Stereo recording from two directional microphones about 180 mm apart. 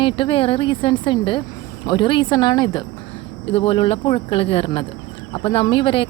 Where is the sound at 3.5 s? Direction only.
30° left (ahead or behind).